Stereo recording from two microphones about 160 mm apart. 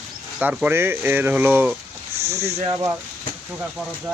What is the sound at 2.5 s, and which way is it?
Speech, 40° right (ahead or behind).